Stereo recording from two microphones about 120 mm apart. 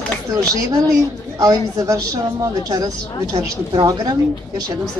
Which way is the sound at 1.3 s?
25° right (ahead or behind).